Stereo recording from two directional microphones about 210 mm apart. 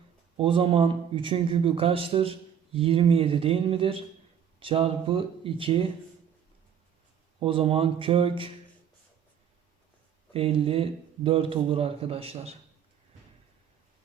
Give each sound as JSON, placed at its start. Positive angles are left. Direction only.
{"t": 0.3, "sound": "speech", "side_deg": -25}
{"t": 7.3, "sound": "speech", "side_deg": -25}
{"t": 10.3, "sound": "speech", "side_deg": -25}